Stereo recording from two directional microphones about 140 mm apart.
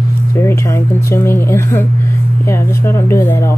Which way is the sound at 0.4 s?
20° left (ahead or behind).